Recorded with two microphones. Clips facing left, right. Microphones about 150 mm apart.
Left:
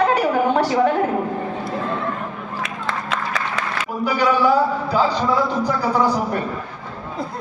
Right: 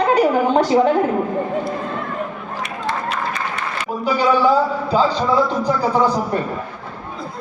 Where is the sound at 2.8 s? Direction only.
90° left.